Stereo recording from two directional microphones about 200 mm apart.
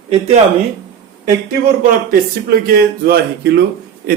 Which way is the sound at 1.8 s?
50° right (ahead or behind).